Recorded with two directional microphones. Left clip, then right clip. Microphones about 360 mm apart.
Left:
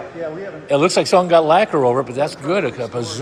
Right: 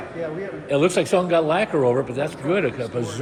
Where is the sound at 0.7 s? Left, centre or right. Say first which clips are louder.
Left 5 dB; centre.